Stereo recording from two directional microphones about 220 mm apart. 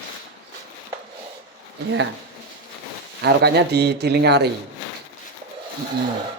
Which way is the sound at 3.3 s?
50° right (ahead or behind).